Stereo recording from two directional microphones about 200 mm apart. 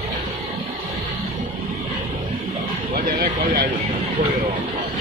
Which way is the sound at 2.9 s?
45° right (ahead or behind).